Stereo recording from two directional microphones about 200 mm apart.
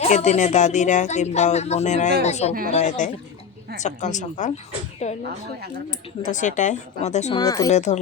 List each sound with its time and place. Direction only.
0.0 s speech: 35° left (ahead or behind)
6.2 s speech: 40° left (ahead or behind)
7.3 s speech: 20° left (ahead or behind)
7.7 s speech: 35° left (ahead or behind)